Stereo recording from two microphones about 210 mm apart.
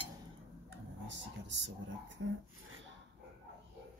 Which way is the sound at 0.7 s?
60° right (ahead or behind).